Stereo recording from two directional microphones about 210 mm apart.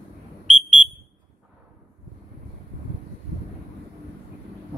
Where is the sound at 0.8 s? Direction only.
35° right (ahead or behind).